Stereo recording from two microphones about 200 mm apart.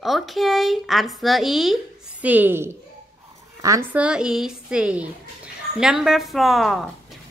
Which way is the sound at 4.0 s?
5° right (ahead or behind).